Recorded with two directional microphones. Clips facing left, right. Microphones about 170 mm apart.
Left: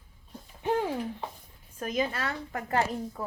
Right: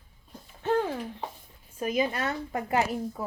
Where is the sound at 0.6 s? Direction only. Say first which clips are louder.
Right 2 dB; 10° left (ahead or behind).